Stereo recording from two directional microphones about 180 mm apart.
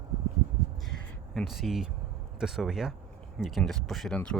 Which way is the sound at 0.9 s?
Centre (ahead or behind).